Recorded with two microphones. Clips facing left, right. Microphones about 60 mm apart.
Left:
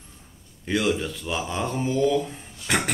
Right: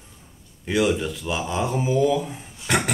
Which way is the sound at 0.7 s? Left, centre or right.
Centre.